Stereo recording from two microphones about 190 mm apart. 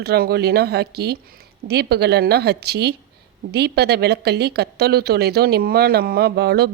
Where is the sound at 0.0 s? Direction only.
55° right (ahead or behind).